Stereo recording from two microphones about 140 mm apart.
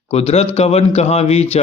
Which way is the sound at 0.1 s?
50° left (ahead or behind).